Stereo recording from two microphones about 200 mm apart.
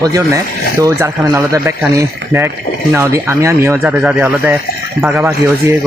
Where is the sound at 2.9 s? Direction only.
15° right (ahead or behind).